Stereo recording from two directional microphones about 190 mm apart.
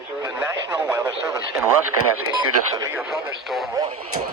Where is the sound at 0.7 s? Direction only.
10° right (ahead or behind).